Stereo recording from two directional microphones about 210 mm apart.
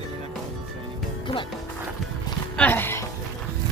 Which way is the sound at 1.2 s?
20° left (ahead or behind).